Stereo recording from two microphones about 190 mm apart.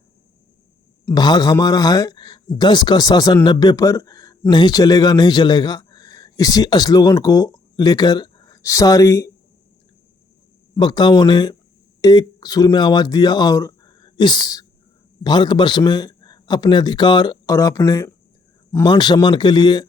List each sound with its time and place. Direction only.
1.0 s speech: 20° left (ahead or behind)
10.8 s speech: 25° left (ahead or behind)